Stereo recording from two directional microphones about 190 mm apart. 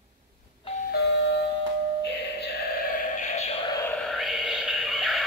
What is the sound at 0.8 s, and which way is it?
Doorbell, 60° left (ahead or behind).